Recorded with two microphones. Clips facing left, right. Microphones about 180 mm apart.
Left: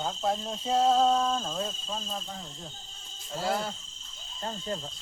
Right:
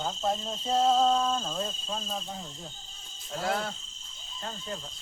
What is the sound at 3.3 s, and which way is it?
Cricket, centre (ahead or behind).